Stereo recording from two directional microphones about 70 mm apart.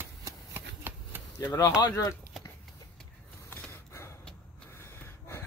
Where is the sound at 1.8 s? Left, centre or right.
Left.